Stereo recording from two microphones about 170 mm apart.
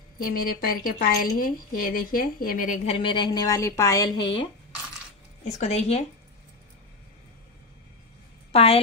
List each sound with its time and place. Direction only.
0.2 s a woman's voice: 60° left (ahead or behind); by 4.5 s 30° left (ahead or behind)
5.4 s speech: 40° left (ahead or behind)
8.5 s a woman's voice: 35° left (ahead or behind)